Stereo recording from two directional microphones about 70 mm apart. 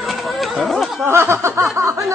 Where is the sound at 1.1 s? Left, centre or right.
Right.